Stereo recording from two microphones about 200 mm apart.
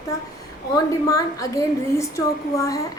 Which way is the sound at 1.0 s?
15° left (ahead or behind).